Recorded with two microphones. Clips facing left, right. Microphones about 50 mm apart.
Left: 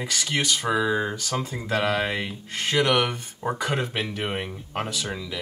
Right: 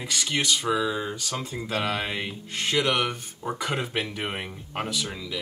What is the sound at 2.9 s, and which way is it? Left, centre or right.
Speech, left.